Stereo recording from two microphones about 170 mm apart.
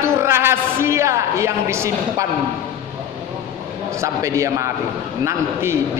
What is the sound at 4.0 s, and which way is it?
A man's voice, 20° right (ahead or behind).